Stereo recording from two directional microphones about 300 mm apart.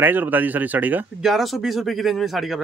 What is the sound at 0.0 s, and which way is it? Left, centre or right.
Speech, centre.